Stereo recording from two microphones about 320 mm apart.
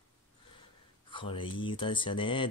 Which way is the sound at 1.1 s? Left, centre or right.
Centre.